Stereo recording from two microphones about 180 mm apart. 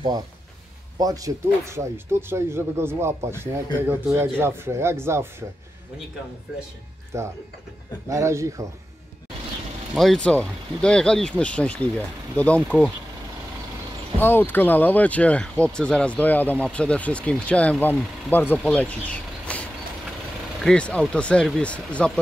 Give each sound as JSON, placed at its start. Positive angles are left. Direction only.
{"t": 0.9, "sound": "speech", "side_deg": -20}
{"t": 7.1, "sound": "speech", "side_deg": -15}
{"t": 9.9, "sound": "speech", "side_deg": 5}
{"t": 12.7, "sound": "speech", "side_deg": -10}
{"t": 14.2, "sound": "speech", "side_deg": 10}